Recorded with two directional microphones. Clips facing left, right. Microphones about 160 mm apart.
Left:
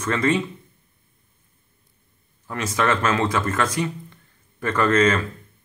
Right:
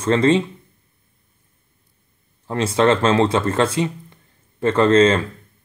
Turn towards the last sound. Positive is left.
turn(degrees=-30)  # may be behind; listen again after turning